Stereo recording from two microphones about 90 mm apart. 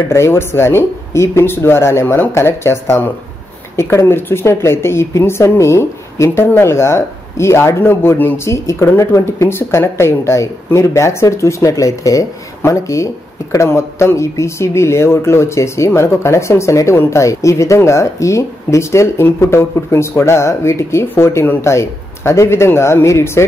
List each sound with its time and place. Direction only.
0.1 s a woman's voice: 30° left (ahead or behind)